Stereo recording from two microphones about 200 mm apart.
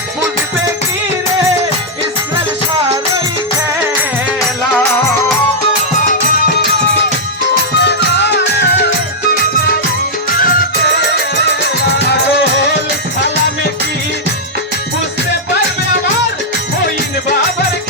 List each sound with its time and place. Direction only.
7.8 s music: 60° left (ahead or behind)
10.3 s music: 45° left (ahead or behind)
11.8 s music: 55° left (ahead or behind)